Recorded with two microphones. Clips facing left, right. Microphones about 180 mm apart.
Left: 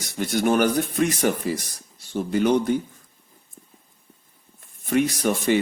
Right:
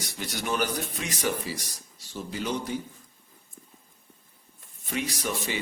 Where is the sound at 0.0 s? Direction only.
55° left (ahead or behind).